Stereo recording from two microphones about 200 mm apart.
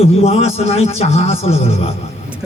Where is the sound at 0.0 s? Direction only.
30° left (ahead or behind).